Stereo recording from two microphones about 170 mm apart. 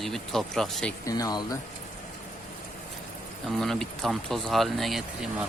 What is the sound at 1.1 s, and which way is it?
Speech, 20° left (ahead or behind).